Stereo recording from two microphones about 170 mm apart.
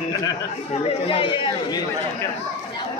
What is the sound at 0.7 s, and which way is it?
Speech, 35° left (ahead or behind).